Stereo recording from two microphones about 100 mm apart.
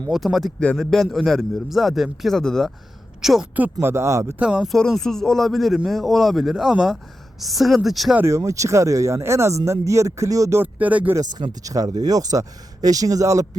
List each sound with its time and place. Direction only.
0.1 s a man's voice: centre (ahead or behind)
3.8 s speech: 30° right (ahead or behind)
4.4 s speech: 10° right (ahead or behind)
4.7 s a man's voice: centre (ahead or behind)
8.1 s speech: 25° right (ahead or behind)
10.6 s speech: 15° right (ahead or behind)
11.2 s speech: 45° right (ahead or behind)